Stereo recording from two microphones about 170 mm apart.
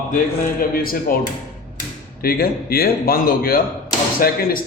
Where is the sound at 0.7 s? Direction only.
60° left (ahead or behind).